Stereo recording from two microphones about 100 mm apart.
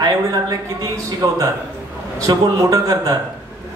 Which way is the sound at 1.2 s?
40° right (ahead or behind).